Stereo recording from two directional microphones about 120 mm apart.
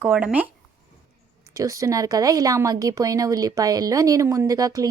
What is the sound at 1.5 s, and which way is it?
A woman's voice, 25° right (ahead or behind).